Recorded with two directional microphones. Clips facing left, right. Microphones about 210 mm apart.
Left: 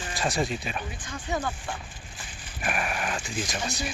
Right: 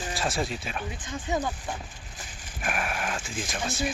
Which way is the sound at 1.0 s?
20° right (ahead or behind).